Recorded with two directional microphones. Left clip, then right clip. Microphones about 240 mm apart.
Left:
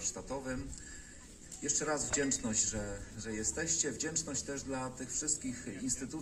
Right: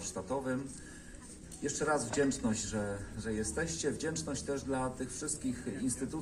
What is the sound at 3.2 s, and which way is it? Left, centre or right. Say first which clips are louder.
Mantra: right 1 dB; centre.